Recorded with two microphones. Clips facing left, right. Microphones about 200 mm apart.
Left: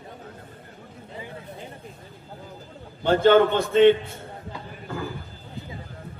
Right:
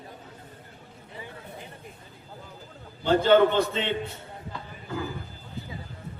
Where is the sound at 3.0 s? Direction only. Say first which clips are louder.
Left 2 dB; 50° left (ahead or behind).